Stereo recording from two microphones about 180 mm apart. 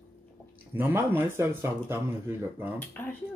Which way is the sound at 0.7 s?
10° right (ahead or behind).